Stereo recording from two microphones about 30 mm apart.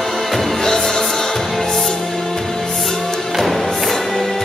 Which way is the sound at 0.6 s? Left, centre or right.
Centre.